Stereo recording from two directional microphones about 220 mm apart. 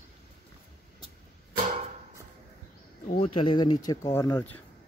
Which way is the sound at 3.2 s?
25° left (ahead or behind).